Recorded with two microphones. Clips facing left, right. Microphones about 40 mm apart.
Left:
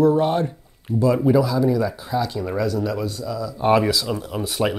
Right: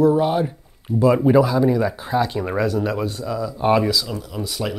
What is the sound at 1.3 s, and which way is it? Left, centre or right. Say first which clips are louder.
Speech: right 2 dB; right.